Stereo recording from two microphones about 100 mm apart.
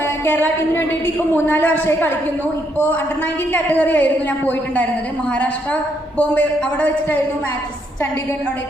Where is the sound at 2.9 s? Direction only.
20° left (ahead or behind).